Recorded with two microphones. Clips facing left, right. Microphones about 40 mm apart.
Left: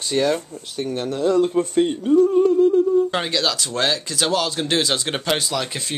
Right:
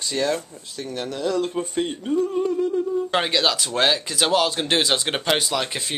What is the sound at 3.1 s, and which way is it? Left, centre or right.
Speech, centre.